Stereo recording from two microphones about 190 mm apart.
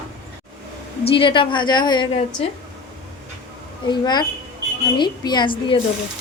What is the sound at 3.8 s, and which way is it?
A woman's voice, 25° left (ahead or behind).